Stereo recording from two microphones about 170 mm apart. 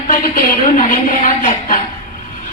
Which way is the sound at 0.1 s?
55° left (ahead or behind).